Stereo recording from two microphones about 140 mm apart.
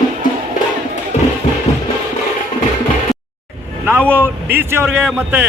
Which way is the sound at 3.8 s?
10° right (ahead or behind).